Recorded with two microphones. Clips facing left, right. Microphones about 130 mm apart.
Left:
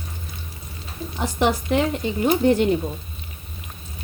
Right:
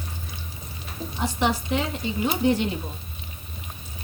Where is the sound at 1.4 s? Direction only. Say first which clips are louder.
Left 5 dB; 50° left (ahead or behind).